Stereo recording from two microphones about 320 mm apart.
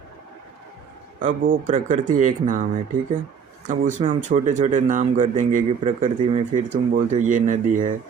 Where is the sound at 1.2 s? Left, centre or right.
Right.